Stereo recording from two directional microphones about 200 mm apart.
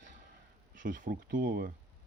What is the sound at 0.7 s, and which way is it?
Speech, 40° right (ahead or behind).